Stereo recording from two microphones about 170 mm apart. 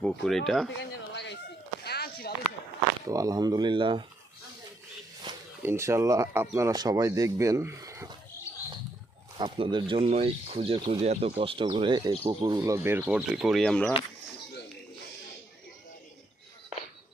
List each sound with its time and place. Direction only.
0.0 s speech: centre (ahead or behind)
0.8 s speech: 90° left
1.8 s a sound: 70° left (ahead or behind)
3.1 s speech: 20° right (ahead or behind)
5.3 s a sound: 25° right (ahead or behind)
5.6 s speech: 15° right (ahead or behind)
9.4 s speech: 25° right (ahead or behind); by 13.9 s 5° left (ahead or behind)